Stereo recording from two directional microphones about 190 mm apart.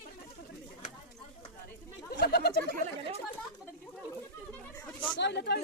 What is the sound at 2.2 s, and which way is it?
Speech, 55° left (ahead or behind).